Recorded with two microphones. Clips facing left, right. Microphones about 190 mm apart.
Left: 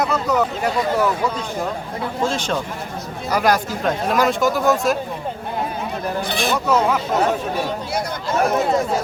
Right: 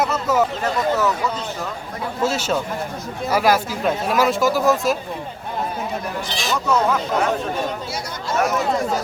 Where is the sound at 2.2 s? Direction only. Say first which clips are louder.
Right 2 dB; 5° right (ahead or behind).